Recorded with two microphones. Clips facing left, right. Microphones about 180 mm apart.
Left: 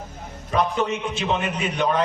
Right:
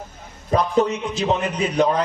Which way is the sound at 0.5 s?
35° right (ahead or behind).